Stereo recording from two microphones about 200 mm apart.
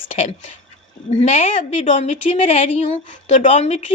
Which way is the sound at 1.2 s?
40° left (ahead or behind).